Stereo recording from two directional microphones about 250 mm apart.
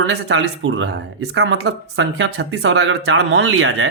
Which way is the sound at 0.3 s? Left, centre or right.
Right.